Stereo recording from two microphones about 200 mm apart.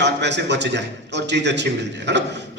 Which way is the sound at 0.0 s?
60° right (ahead or behind).